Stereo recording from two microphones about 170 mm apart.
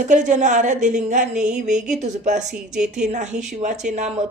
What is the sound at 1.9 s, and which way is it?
Speech, 45° right (ahead or behind).